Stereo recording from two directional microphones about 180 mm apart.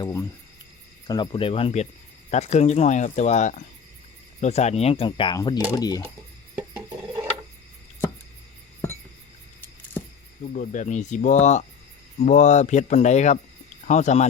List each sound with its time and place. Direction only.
0.0 s cricket: 15° left (ahead or behind)
1.0 s speech: 25° left (ahead or behind)
10.4 s speech: 45° left (ahead or behind)